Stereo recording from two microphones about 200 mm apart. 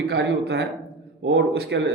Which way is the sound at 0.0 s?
55° right (ahead or behind).